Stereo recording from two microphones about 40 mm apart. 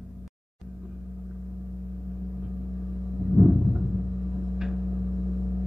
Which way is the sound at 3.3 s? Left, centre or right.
Centre.